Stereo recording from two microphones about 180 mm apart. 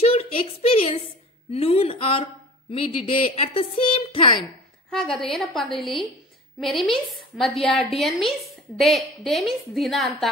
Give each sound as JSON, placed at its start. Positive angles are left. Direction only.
{"t": 0.0, "sound": "a sound", "side_deg": 35}
{"t": 1.5, "sound": "a woman's voice", "side_deg": 35}
{"t": 4.9, "sound": "a woman's voice", "side_deg": 0}